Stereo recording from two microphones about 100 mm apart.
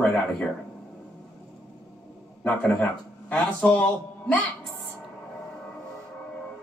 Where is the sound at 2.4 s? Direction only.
15° left (ahead or behind).